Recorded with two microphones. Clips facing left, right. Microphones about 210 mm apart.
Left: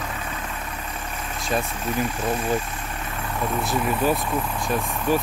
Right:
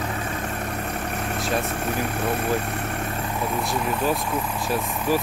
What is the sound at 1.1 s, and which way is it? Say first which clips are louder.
Speech: even; 60° right (ahead or behind).